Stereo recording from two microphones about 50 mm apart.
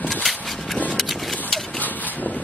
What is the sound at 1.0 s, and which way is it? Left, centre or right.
Horse, centre.